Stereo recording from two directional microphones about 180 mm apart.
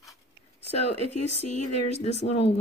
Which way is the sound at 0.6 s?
35° left (ahead or behind).